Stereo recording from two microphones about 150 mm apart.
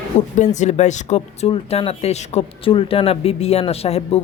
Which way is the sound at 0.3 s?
50° left (ahead or behind).